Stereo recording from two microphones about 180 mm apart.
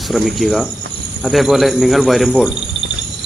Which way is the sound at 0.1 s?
Centre (ahead or behind).